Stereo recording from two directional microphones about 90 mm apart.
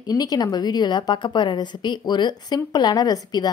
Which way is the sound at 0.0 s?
45° left (ahead or behind).